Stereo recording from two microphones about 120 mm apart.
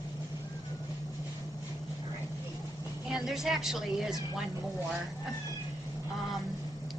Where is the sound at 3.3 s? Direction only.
5° right (ahead or behind).